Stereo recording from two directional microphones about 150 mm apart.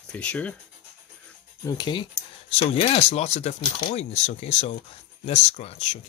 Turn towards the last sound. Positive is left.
turn(degrees=45)  # may be behind; listen again after turning